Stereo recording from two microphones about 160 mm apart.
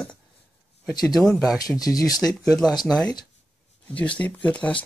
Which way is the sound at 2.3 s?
5° left (ahead or behind).